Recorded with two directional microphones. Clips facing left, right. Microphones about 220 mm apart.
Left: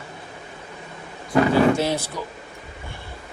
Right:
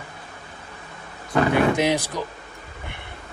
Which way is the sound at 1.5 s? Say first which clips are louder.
Right 1 dB; 15° right (ahead or behind).